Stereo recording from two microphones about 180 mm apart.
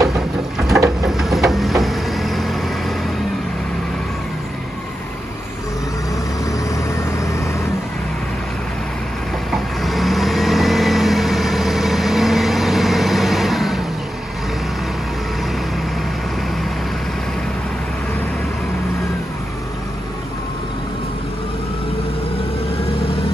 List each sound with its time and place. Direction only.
0.1 s a sound: centre (ahead or behind)
6.7 s vehicle: 15° left (ahead or behind)
9.5 s vehicle: centre (ahead or behind)